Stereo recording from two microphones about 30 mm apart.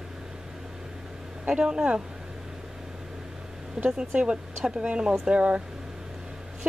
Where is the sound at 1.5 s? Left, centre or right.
Right.